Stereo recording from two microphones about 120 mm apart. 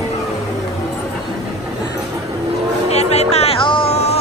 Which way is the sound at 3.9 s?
60° left (ahead or behind).